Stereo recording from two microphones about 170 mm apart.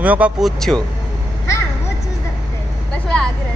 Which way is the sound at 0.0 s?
10° right (ahead or behind).